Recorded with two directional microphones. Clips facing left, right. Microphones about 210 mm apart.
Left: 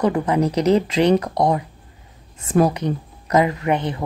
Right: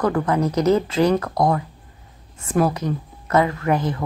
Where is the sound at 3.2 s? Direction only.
15° left (ahead or behind).